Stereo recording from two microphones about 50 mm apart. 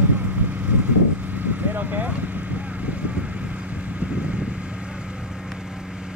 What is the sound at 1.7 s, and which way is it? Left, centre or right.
Vehicle, right.